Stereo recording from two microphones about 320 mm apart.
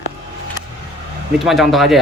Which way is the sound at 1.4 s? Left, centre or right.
Centre.